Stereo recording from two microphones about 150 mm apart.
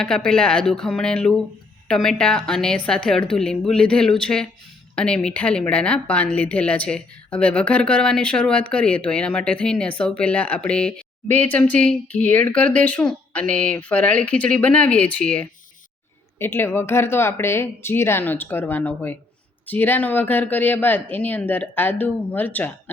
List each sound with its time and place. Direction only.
0.0 s a woman's voice: 5° left (ahead or behind)